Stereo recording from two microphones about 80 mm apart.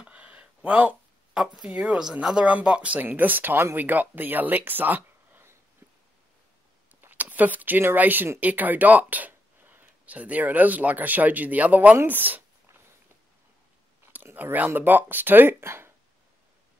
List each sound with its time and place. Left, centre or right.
0.0 s a sound: centre
1.3 s speech: centre
7.0 s speech: right
14.1 s speech: right